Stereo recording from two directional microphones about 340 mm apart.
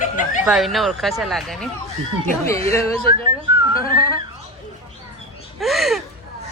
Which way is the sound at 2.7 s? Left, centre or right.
Centre.